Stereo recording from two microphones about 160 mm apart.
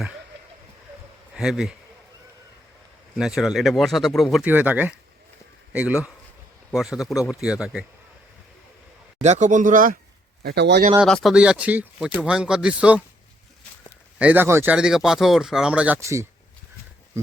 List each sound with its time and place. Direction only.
1.3 s speech: 5° right (ahead or behind)
3.2 s speech: 5° right (ahead or behind)
4.4 s speech: 10° right (ahead or behind)
9.2 s speech: 45° right (ahead or behind)
10.4 s speech: 90° right
11.0 s speech: centre (ahead or behind)
14.2 s speech: 10° right (ahead or behind)
16.0 s speech: 20° right (ahead or behind)